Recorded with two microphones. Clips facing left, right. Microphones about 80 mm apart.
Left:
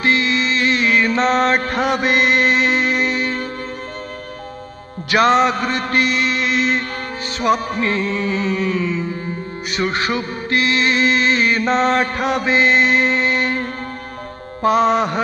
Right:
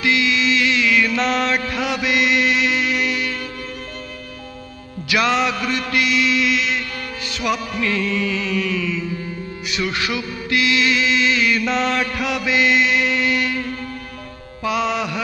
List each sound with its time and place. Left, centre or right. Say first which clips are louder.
0.0 s mantra: left 1 dB; left
5.1 s music: left 5 dB; left